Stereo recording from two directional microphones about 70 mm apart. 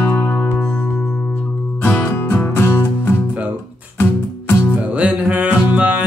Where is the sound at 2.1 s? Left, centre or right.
Left.